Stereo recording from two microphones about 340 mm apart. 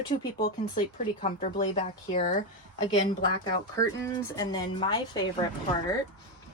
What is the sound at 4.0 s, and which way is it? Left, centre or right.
Speech, centre.